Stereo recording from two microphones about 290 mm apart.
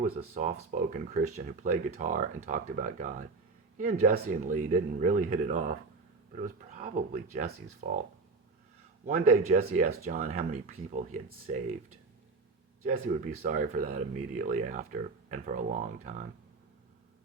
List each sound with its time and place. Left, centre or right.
0.0 s speech: right
9.0 s speech: right
13.3 s speech: right